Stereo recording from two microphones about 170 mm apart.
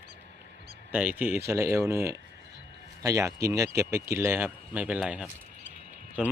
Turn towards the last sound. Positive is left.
turn(degrees=-5)  # may be behind; listen again after turning